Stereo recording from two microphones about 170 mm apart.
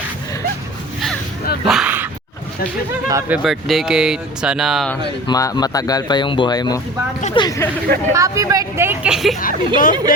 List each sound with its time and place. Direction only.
1.6 s dog: 5° right (ahead or behind)
3.1 s speech: 15° right (ahead or behind)
5.3 s speech: 20° left (ahead or behind)
8.1 s speech: 20° right (ahead or behind)
9.4 s a woman's voice: 55° left (ahead or behind)